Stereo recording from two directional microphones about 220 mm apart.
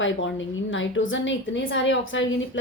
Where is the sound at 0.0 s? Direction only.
60° left (ahead or behind).